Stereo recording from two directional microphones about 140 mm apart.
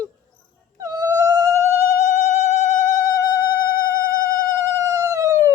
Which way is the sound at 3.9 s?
20° right (ahead or behind).